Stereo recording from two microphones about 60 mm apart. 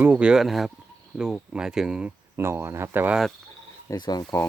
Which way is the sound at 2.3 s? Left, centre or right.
Right.